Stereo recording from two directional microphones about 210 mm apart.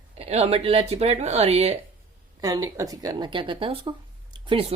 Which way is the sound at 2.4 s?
15° right (ahead or behind).